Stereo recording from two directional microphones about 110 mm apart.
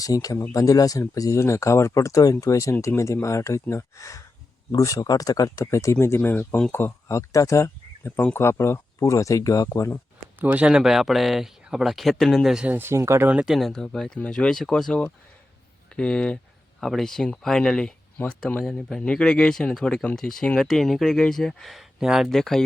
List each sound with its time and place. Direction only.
0.0 s speech: 30° left (ahead or behind)
10.3 s speech: 15° right (ahead or behind)
12.6 s speech: 20° right (ahead or behind)
13.3 s speech: 5° right (ahead or behind)